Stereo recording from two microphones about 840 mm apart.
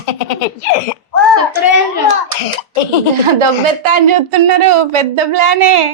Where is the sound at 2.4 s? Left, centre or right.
Left.